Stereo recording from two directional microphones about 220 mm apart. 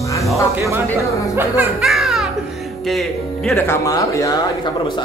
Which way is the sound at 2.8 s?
Centre (ahead or behind).